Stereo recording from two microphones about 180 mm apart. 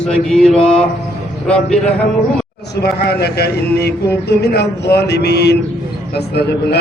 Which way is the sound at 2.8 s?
60° left (ahead or behind).